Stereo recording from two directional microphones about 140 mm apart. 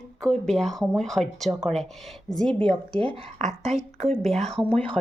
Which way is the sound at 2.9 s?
40° right (ahead or behind).